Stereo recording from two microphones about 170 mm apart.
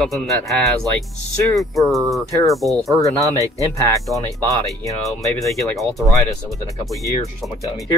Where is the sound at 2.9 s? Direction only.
20° left (ahead or behind).